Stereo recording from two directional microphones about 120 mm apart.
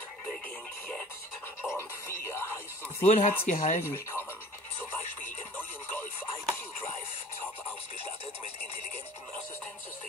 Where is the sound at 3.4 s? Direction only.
90° left.